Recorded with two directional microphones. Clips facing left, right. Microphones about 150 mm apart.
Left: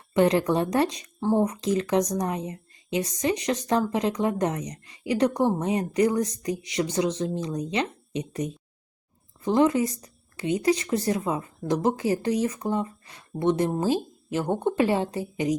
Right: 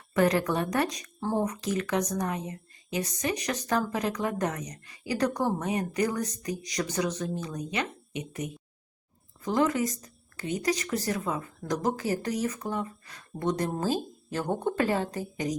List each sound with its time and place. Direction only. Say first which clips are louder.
0.1 s a woman's voice: left 4 dB; 25° left (ahead or behind)
13.7 s a woman's voice: left 4 dB; 10° left (ahead or behind)